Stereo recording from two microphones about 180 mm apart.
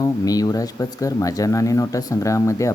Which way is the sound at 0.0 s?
20° left (ahead or behind).